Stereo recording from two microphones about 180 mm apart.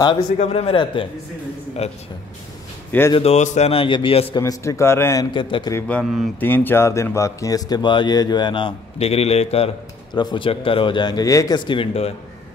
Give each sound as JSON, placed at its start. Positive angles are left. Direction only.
{"t": 0.4, "sound": "a man's voice", "side_deg": 35}
{"t": 3.2, "sound": "a man's voice", "side_deg": 35}
{"t": 4.4, "sound": "a man's voice", "side_deg": 15}
{"t": 5.9, "sound": "speech", "side_deg": 5}